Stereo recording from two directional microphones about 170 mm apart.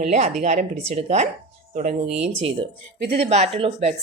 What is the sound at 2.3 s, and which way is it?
Speech, 35° right (ahead or behind).